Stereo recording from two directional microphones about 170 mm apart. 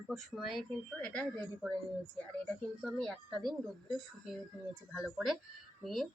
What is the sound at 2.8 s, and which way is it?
Speech, centre (ahead or behind).